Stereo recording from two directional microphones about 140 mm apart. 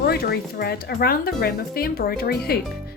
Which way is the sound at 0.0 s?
90° left.